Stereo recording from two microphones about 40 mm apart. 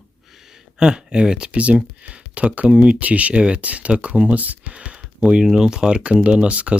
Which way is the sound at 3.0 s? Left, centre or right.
Right.